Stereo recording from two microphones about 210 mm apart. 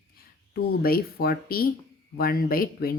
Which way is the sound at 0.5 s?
45° left (ahead or behind).